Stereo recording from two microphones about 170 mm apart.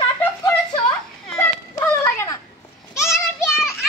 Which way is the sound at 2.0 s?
15° left (ahead or behind).